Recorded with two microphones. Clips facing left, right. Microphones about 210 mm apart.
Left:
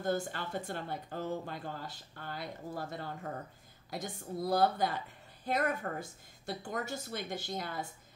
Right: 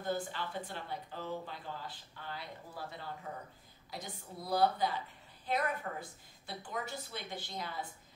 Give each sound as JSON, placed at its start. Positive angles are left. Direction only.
{"t": 0.0, "sound": "a woman's voice", "side_deg": 45}